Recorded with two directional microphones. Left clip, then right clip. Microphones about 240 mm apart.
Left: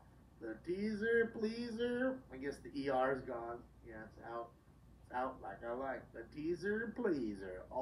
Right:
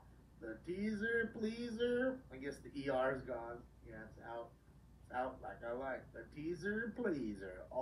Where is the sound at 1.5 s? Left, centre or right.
Right.